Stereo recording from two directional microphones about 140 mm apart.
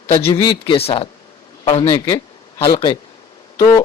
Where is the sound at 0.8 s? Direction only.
45° left (ahead or behind).